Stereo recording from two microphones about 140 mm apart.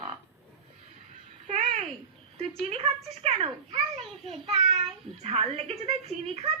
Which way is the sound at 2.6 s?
45° right (ahead or behind).